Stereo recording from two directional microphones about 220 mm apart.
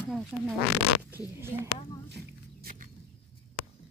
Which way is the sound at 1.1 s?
10° right (ahead or behind).